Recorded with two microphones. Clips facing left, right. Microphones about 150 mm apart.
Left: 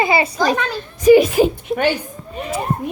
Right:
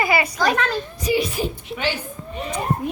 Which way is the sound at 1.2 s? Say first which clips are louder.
Left 10 dB; 90° left.